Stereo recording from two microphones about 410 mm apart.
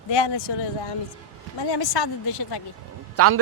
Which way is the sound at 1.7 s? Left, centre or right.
Left.